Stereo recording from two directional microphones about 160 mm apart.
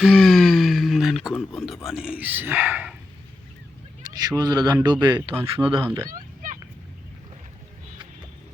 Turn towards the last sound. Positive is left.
turn(degrees=-55)  # may be behind; listen again after turning